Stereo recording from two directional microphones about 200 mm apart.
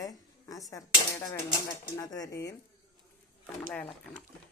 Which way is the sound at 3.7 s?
5° left (ahead or behind).